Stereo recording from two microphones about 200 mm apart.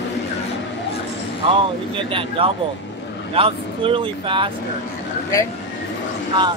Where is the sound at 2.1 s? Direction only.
25° right (ahead or behind).